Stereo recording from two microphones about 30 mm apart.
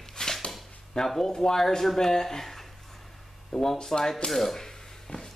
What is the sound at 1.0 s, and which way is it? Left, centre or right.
Speech, centre.